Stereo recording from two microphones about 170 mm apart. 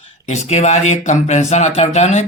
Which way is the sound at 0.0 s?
40° left (ahead or behind).